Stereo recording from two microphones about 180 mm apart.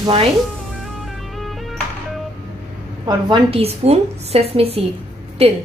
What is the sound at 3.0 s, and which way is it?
Speech, 30° right (ahead or behind).